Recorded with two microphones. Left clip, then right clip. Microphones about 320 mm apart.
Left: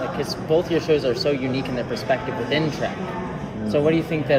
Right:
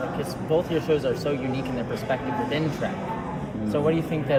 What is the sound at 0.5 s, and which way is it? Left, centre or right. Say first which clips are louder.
Speech: left 4 dB; left.